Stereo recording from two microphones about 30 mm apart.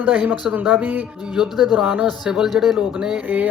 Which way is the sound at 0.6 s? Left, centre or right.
Right.